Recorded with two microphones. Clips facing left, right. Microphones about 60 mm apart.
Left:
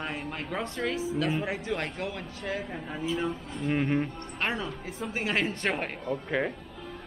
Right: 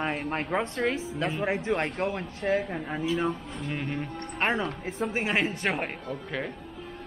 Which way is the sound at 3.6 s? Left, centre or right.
Centre.